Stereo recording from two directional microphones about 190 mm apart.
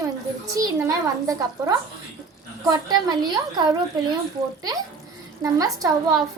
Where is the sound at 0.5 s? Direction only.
15° right (ahead or behind).